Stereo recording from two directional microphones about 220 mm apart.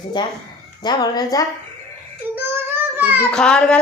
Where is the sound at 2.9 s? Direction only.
10° right (ahead or behind).